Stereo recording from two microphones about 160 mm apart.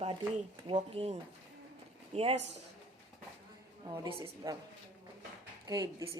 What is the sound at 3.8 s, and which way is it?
Speech, 25° right (ahead or behind).